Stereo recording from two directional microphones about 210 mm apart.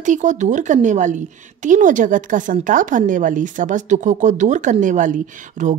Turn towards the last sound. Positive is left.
turn(degrees=-35)  # may be behind; listen again after turning